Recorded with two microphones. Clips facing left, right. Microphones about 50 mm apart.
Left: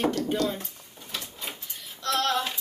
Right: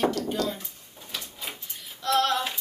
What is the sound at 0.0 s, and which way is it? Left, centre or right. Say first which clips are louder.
Speech: even; left.